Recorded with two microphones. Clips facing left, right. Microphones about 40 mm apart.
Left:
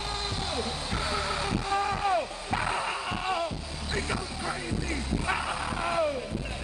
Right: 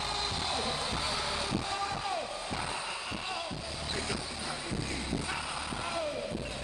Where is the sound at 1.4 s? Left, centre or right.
Left.